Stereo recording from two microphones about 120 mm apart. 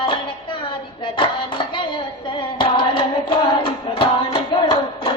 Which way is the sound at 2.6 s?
45° left (ahead or behind).